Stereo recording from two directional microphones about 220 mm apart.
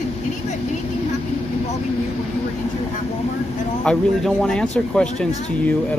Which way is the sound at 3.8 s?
5° left (ahead or behind).